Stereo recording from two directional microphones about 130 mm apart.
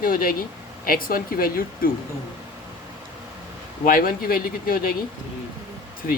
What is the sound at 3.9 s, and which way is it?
Speech, 90° left.